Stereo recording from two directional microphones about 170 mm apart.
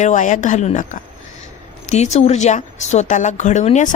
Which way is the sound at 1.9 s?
40° left (ahead or behind).